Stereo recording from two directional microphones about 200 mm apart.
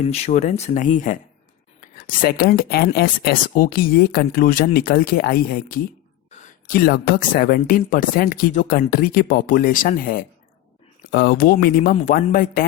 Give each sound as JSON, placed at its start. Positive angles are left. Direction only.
{"t": 0.1, "sound": "speech", "side_deg": 35}
{"t": 11.1, "sound": "speech", "side_deg": 55}